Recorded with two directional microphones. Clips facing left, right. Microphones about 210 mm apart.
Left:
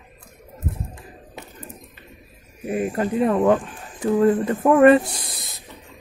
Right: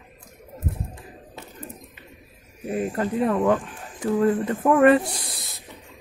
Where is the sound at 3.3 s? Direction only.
30° left (ahead or behind).